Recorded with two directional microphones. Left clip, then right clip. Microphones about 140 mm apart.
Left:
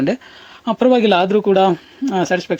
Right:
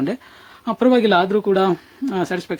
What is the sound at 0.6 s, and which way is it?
Speech, 5° left (ahead or behind).